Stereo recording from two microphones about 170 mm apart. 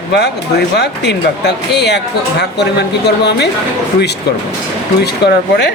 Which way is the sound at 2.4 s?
80° left.